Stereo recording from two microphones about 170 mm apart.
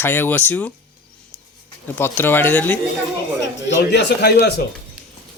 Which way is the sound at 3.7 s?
90° left.